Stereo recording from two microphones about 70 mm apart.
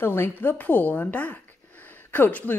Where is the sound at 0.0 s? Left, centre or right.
Left.